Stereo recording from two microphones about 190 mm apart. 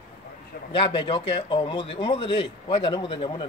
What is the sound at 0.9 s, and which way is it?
Speech, 25° left (ahead or behind).